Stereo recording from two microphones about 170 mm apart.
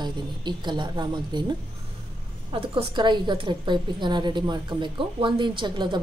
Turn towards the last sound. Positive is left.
turn(degrees=-25)  # may be behind; listen again after turning